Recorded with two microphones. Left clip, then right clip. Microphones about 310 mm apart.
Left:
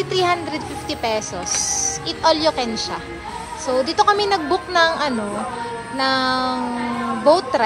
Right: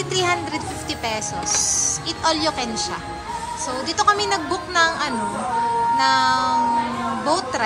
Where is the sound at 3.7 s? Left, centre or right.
Centre.